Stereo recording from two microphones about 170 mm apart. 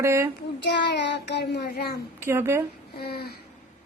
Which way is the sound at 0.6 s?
90° left.